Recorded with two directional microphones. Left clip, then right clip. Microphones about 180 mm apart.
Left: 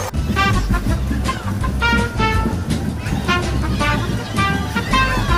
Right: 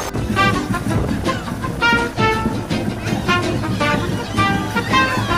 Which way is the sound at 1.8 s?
Centre (ahead or behind).